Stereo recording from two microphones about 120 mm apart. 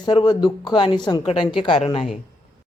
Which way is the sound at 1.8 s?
55° left (ahead or behind).